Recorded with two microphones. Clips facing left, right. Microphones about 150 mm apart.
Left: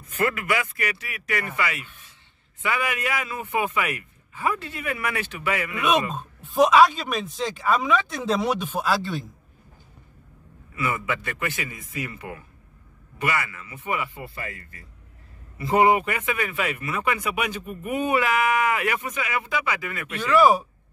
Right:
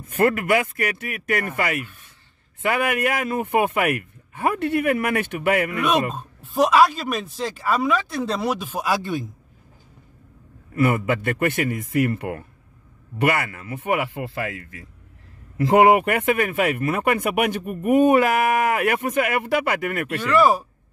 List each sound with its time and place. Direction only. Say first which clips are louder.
0.0 s a man's voice: right 6 dB; 50° right (ahead or behind)
6.1 s speech: left 1 dB; 5° right (ahead or behind)
10.7 s a man's voice: right 7 dB; 55° right (ahead or behind)
20.2 s speech: even; centre (ahead or behind)